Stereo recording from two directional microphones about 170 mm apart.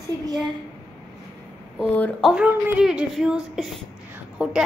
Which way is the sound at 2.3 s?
5° right (ahead or behind).